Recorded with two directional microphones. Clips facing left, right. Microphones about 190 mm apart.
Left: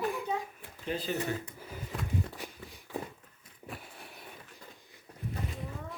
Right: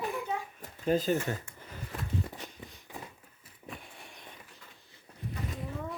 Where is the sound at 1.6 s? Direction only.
5° left (ahead or behind).